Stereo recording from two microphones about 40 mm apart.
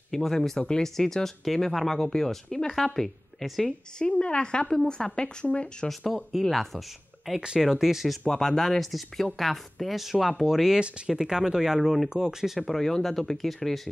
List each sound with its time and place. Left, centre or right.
0.1 s speech: centre
4.0 s a woman's voice: left
5.9 s speech: centre
7.3 s speech: centre
8.3 s speech: centre
12.1 s speech: centre
12.6 s speech: centre